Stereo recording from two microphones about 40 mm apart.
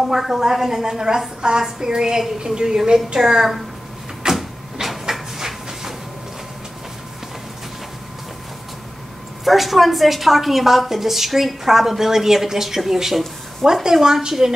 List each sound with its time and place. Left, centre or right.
0.0 s a woman's voice: centre
4.4 s a sound: centre
9.4 s a woman's voice: centre